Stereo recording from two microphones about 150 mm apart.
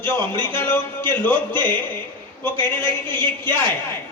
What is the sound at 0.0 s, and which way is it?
A man's voice, 15° left (ahead or behind).